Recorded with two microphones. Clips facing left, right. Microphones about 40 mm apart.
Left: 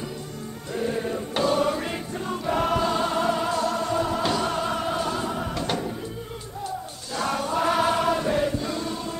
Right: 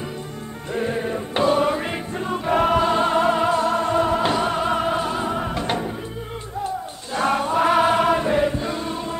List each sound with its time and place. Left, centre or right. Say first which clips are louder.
0.7 s music: right 3 dB; right
7.2 s choir: right 5 dB; right